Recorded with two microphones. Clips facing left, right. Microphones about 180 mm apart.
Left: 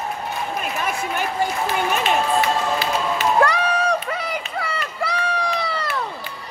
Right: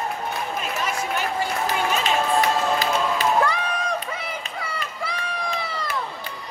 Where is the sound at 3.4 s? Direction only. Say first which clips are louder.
Left 4 dB; 75° left (ahead or behind).